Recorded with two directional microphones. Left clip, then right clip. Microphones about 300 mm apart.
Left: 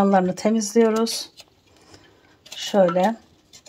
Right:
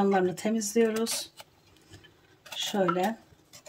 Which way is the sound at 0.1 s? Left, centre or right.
Centre.